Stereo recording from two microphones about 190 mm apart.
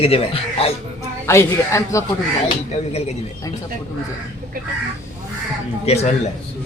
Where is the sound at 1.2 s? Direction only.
15° left (ahead or behind).